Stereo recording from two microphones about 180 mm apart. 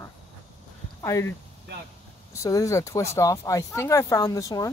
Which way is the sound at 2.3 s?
15° left (ahead or behind).